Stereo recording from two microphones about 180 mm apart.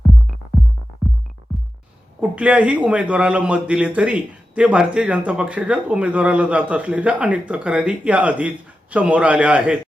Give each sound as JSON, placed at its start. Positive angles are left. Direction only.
{"t": 0.6, "sound": "music", "side_deg": 0}
{"t": 2.3, "sound": "speech", "side_deg": -5}